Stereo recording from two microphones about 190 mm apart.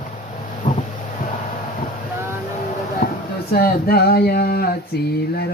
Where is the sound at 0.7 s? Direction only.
45° left (ahead or behind).